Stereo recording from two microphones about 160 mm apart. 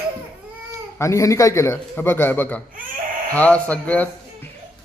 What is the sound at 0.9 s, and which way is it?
Speech, 20° left (ahead or behind).